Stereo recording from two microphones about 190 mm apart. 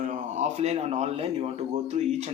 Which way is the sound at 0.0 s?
40° right (ahead or behind).